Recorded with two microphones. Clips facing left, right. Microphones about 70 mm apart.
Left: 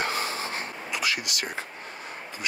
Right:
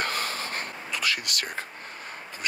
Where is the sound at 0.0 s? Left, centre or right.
Right.